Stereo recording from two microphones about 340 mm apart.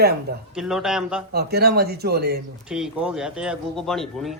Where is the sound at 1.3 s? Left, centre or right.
Right.